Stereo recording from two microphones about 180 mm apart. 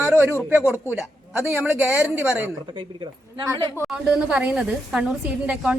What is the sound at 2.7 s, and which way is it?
Speech, 25° right (ahead or behind).